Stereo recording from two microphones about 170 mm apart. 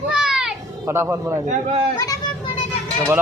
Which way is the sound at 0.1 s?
5° right (ahead or behind).